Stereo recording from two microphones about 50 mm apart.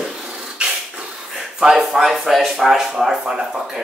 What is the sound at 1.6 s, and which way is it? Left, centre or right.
Speech, centre.